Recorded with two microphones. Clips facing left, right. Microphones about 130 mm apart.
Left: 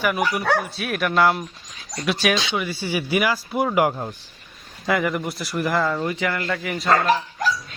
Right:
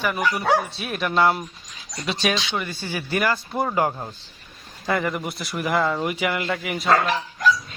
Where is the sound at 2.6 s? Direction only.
10° left (ahead or behind).